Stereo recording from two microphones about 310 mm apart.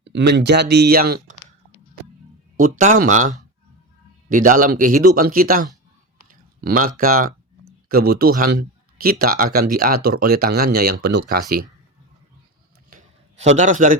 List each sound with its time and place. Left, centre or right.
0.0 s speech: right
2.6 s speech: right
12.9 s a sound: right
13.6 s speech: right